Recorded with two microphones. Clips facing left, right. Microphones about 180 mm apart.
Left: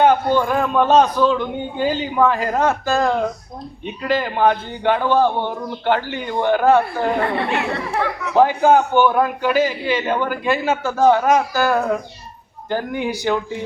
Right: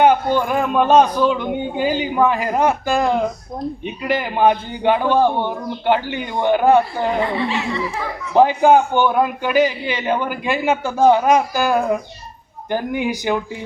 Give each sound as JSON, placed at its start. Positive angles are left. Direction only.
{"t": 0.0, "sound": "a man's voice", "side_deg": -15}
{"t": 7.2, "sound": "speech", "side_deg": 60}
{"t": 8.4, "sound": "a man's voice", "side_deg": -15}